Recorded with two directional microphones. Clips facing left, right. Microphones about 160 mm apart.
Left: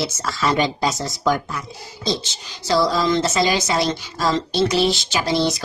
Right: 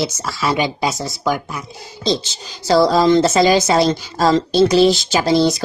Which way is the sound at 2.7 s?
40° right (ahead or behind).